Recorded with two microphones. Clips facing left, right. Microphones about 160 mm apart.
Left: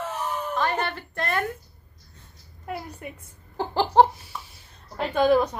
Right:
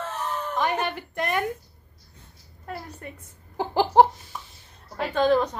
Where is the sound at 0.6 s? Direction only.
15° right (ahead or behind).